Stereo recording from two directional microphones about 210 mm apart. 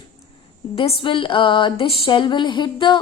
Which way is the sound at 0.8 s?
25° left (ahead or behind).